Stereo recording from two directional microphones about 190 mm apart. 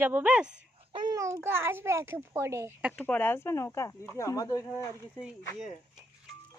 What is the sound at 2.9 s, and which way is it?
Speech, 5° left (ahead or behind).